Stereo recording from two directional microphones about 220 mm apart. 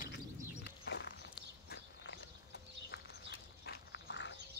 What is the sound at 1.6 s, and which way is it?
Walk, 50° left (ahead or behind).